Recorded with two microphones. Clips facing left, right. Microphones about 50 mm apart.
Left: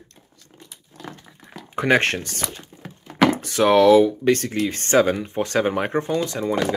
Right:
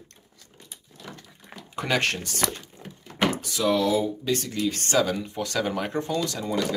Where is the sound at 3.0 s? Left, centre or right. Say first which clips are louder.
Left 7 dB; left.